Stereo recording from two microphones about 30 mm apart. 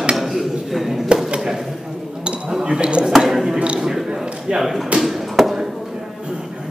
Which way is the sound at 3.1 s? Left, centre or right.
Centre.